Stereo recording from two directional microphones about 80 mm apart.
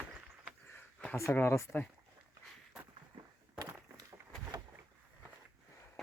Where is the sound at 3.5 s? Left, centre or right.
Right.